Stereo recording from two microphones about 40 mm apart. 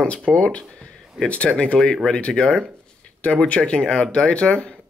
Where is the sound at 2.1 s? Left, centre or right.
Left.